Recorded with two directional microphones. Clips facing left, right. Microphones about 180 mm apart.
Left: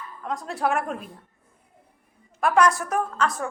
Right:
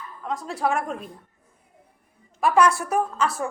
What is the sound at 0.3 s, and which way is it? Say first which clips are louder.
Speech: even; centre (ahead or behind).